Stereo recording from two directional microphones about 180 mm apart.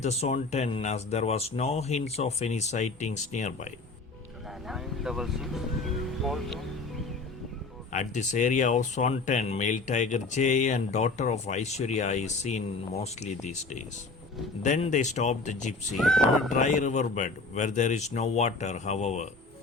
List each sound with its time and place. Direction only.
0.0 s speech: 35° left (ahead or behind)
4.7 s speech: centre (ahead or behind)
7.9 s speech: 45° left (ahead or behind)
16.0 s speech: centre (ahead or behind)
16.5 s speech: 45° left (ahead or behind)